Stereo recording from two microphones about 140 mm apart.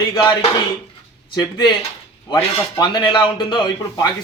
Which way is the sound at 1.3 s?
30° left (ahead or behind).